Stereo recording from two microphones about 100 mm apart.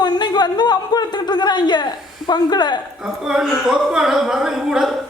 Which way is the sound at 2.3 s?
45° left (ahead or behind).